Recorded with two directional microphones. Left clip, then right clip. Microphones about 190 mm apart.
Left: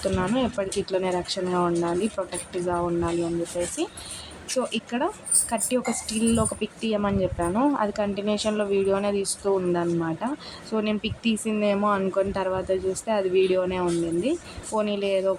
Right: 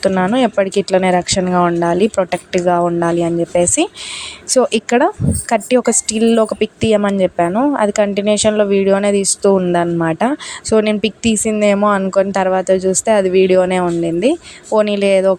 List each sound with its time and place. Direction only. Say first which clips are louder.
0.0 s a woman's voice: right 11 dB; 40° right (ahead or behind)